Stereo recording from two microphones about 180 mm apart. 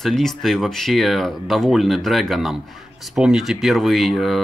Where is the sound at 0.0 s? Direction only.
Centre (ahead or behind).